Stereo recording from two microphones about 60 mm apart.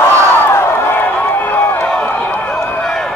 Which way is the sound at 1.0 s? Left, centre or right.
Left.